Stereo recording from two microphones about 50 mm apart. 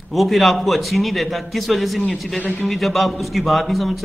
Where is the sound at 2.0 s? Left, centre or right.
Left.